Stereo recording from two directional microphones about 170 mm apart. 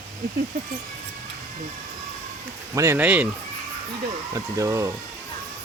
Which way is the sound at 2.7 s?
15° right (ahead or behind).